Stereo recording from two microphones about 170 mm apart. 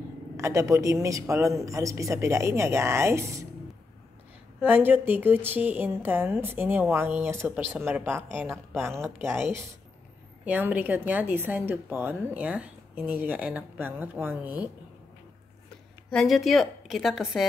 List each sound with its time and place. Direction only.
0.4 s a woman's voice: 15° right (ahead or behind)
4.6 s a woman's voice: 10° right (ahead or behind)
16.1 s a woman's voice: centre (ahead or behind)